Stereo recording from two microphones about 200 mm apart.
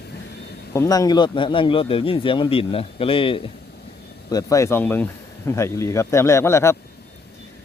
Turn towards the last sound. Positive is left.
turn(degrees=15)  # may be behind; listen again after turning